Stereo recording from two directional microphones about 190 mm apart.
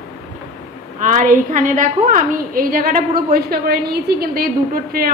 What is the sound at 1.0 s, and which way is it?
A woman's voice, 45° right (ahead or behind).